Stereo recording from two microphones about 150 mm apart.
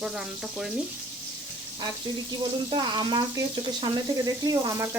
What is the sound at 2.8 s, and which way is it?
Speech, 30° right (ahead or behind).